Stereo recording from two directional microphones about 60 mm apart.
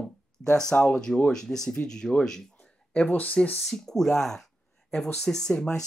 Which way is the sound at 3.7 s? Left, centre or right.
Centre.